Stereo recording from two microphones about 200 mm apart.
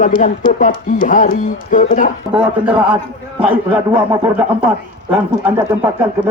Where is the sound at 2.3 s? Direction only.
5° right (ahead or behind).